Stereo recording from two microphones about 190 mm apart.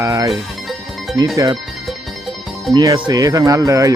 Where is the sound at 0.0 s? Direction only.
15° right (ahead or behind).